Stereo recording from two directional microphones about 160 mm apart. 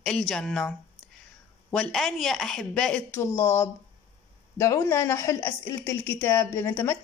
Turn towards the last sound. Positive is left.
turn(degrees=10)  # may be behind; listen again after turning